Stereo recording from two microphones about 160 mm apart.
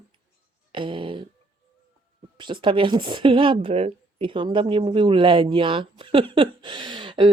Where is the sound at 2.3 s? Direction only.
30° right (ahead or behind).